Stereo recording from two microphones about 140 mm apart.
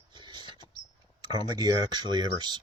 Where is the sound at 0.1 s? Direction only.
35° right (ahead or behind).